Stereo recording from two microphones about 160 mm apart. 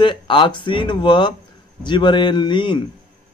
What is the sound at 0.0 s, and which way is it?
Speech, 30° left (ahead or behind).